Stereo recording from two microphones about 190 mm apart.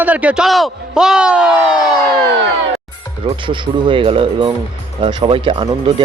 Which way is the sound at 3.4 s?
25° right (ahead or behind).